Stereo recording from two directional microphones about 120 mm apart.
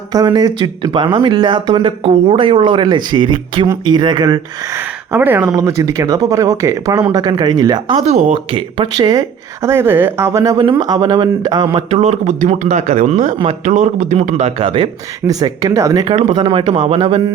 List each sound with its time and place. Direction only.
0.1 s speech: 35° right (ahead or behind)
5.1 s speech: 15° right (ahead or behind)
5.5 s speech: 30° right (ahead or behind)
8.0 s speech: 60° right (ahead or behind)
8.5 s speech: 40° right (ahead or behind)
9.6 s speech: 20° right (ahead or behind); by 11.8 s 35° right (ahead or behind)
11.9 s a man's voice: 65° right (ahead or behind)
14.6 s speech: 45° right (ahead or behind)
15.3 s speech: 30° right (ahead or behind)
16.3 s speech: 45° right (ahead or behind)